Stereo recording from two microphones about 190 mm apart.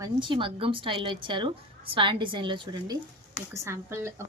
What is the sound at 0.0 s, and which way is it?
A woman's voice, 25° right (ahead or behind).